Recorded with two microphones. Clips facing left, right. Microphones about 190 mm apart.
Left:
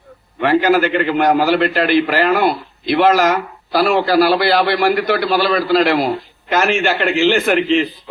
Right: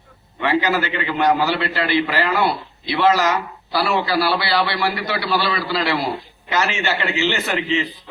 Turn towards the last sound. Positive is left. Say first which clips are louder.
# left 7 dB
turn(degrees=55)  # may be behind; listen again after turning